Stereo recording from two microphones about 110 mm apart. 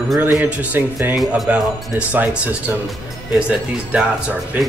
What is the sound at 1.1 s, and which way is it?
Speech, centre (ahead or behind).